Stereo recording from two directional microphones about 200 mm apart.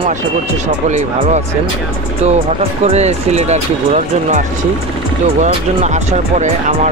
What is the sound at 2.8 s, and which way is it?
Speech, 35° right (ahead or behind).